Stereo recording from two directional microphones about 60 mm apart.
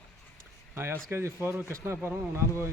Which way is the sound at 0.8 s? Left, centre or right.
Right.